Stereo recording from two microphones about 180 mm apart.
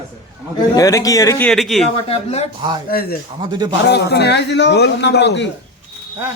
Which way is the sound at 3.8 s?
65° left (ahead or behind).